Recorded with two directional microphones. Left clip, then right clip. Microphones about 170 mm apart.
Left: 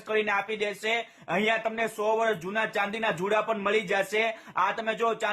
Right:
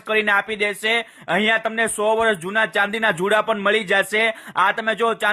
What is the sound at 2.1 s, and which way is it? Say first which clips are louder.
Speech: right 7 dB; 35° right (ahead or behind).